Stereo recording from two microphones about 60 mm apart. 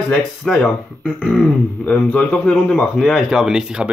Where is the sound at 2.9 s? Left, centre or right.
Centre.